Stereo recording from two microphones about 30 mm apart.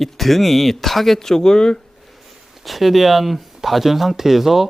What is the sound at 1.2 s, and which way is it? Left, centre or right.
Speech, centre.